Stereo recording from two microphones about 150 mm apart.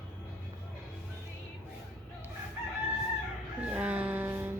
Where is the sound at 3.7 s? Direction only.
10° right (ahead or behind).